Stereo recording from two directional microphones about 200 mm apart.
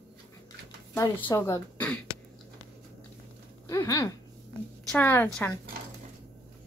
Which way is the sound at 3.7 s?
15° left (ahead or behind).